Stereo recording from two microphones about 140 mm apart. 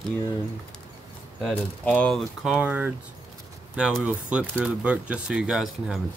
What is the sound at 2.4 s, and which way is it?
Speech, 10° right (ahead or behind).